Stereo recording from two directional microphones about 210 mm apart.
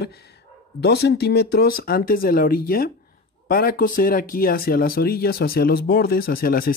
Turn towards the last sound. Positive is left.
turn(degrees=45)  # may be behind; listen again after turning